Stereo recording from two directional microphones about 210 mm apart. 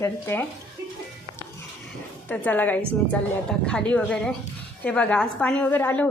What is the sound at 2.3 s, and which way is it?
A woman's voice, 10° left (ahead or behind).